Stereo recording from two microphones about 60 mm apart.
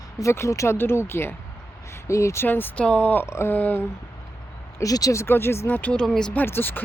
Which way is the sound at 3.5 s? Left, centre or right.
Left.